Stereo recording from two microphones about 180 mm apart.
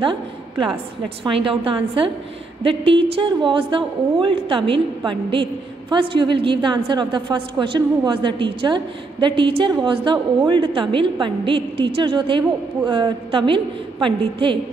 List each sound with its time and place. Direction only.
0.0 s a woman's voice: 25° right (ahead or behind)